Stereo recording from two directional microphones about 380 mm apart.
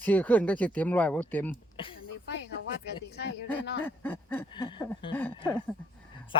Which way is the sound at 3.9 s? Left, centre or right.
Centre.